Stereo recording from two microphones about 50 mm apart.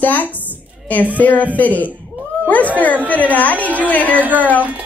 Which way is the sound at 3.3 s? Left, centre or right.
Left.